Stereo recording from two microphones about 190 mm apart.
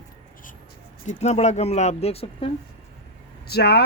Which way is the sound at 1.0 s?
35° left (ahead or behind).